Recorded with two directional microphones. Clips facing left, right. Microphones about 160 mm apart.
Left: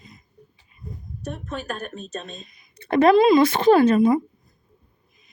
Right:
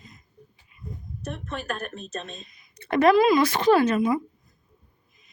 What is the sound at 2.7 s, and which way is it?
Speech, 30° left (ahead or behind).